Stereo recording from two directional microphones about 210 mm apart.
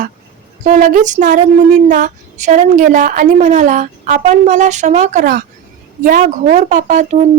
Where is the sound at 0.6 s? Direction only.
35° right (ahead or behind).